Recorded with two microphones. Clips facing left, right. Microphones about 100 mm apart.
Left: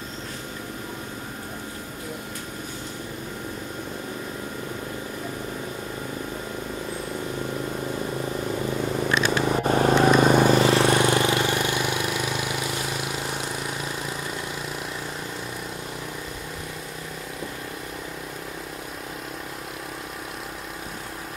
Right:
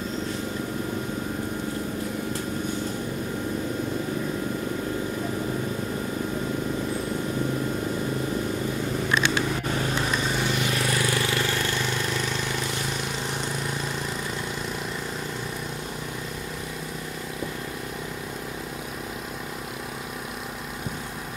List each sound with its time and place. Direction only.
9.2 s a sound: 35° left (ahead or behind)
9.9 s vehicle: 60° left (ahead or behind)
10.8 s vehicle: 30° left (ahead or behind); by 13.8 s 5° left (ahead or behind)